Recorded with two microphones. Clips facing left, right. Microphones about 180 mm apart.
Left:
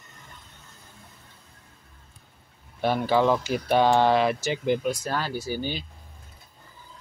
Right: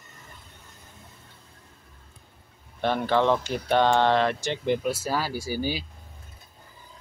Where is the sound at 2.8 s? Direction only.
5° left (ahead or behind); by 5.8 s 10° right (ahead or behind).